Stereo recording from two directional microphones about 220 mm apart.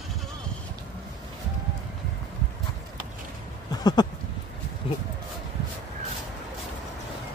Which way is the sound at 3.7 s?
20° left (ahead or behind).